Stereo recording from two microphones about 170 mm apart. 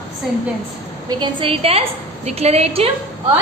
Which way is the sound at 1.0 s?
30° right (ahead or behind).